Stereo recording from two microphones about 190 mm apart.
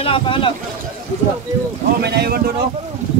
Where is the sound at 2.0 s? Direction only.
60° right (ahead or behind).